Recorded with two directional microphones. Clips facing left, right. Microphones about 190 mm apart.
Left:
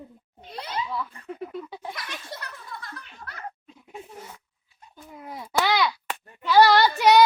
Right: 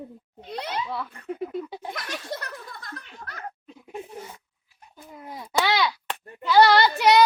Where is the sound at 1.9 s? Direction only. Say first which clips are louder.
Right 5 dB; 50° right (ahead or behind).